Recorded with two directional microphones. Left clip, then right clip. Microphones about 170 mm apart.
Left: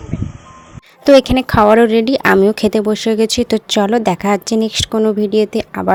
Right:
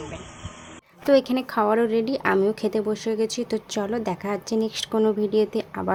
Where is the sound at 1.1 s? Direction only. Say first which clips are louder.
Left 11 dB; 50° left (ahead or behind).